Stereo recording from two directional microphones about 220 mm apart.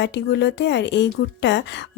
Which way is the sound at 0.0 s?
55° left (ahead or behind).